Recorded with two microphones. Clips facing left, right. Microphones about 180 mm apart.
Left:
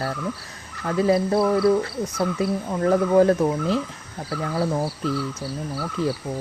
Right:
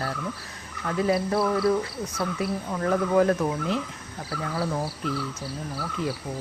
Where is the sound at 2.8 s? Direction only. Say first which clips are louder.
Left 5 dB; 30° left (ahead or behind).